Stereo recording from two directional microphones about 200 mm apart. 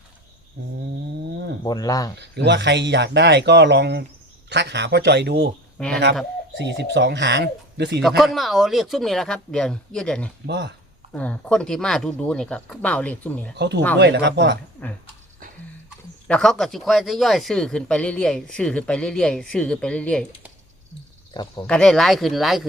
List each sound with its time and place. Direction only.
0.6 s speech: 55° right (ahead or behind)
1.6 s speech: 20° left (ahead or behind)
2.1 s speech: 60° right (ahead or behind)
5.7 s speech: 5° left (ahead or behind)
6.6 s speech: 60° right (ahead or behind)
8.0 s speech: centre (ahead or behind)
10.4 s speech: 60° right (ahead or behind)
11.1 s speech: 5° left (ahead or behind)
13.6 s speech: 60° right (ahead or behind)
14.8 s speech: 5° left (ahead or behind)
16.2 s speech: 5° left (ahead or behind)
21.3 s speech: 20° left (ahead or behind)
21.7 s speech: 5° left (ahead or behind)